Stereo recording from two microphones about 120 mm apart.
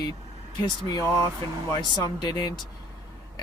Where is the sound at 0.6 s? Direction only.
35° left (ahead or behind).